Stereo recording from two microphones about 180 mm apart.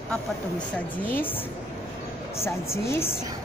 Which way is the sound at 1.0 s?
10° left (ahead or behind).